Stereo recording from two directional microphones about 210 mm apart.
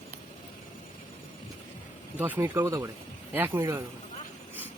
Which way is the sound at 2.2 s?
10° right (ahead or behind).